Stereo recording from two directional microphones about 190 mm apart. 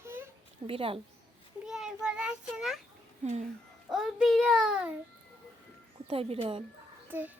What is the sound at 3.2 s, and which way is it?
Speech, 40° right (ahead or behind).